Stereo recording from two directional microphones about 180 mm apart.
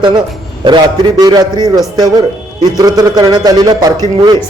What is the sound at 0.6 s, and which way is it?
A man's voice, 25° right (ahead or behind).